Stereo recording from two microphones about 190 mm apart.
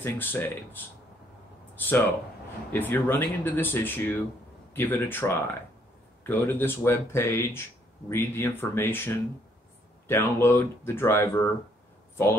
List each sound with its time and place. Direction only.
0.0 s speech: 10° left (ahead or behind)